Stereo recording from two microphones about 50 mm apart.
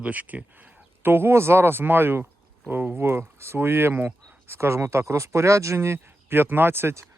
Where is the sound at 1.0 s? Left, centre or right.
Right.